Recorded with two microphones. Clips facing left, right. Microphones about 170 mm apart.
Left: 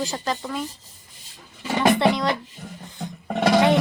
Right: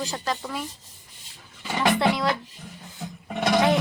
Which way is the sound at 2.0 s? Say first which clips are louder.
Left 2 dB; centre (ahead or behind).